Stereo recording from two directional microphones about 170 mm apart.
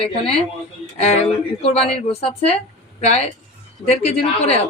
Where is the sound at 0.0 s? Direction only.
35° left (ahead or behind).